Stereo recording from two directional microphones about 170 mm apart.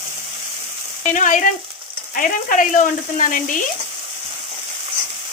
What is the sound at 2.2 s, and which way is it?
Speech, 50° left (ahead or behind).